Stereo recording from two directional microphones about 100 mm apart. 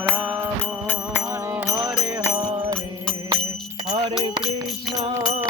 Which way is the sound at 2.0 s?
40° right (ahead or behind).